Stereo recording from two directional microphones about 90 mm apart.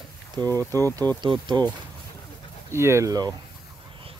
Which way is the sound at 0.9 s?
55° right (ahead or behind).